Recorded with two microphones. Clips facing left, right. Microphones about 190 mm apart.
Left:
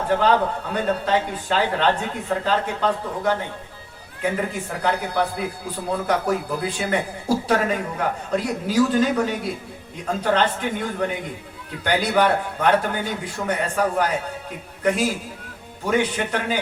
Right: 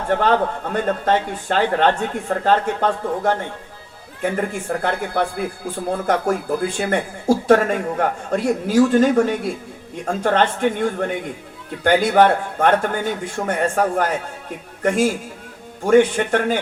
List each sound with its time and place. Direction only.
0.2 s speech: 45° right (ahead or behind)